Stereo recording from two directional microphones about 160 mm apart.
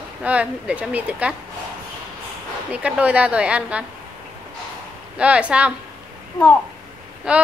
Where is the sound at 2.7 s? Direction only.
10° right (ahead or behind).